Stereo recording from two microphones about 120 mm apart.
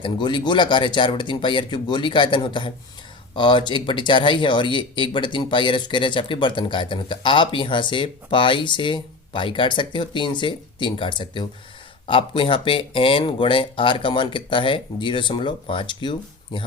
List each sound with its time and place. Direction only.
0.0 s speech: 40° left (ahead or behind)